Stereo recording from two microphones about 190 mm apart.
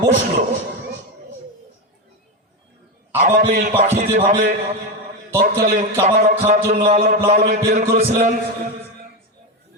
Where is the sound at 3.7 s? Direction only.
40° right (ahead or behind).